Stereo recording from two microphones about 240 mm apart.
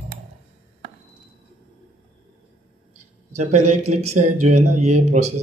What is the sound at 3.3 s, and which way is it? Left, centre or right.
A man's voice, right.